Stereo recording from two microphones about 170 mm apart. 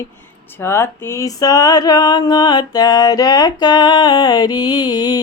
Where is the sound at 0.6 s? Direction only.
15° left (ahead or behind).